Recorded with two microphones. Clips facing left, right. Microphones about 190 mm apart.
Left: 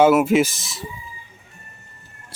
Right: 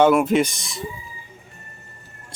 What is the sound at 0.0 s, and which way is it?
Speech, 5° left (ahead or behind).